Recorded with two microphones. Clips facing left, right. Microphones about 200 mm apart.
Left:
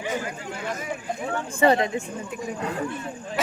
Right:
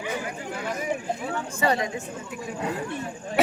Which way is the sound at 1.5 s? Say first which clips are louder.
Left 6 dB; 30° left (ahead or behind).